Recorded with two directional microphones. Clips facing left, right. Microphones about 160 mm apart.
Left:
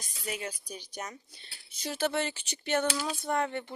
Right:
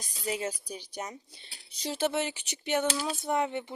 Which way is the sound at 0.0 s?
30° right (ahead or behind).